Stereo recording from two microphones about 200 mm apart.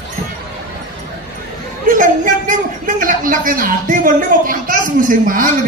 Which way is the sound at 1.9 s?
40° right (ahead or behind).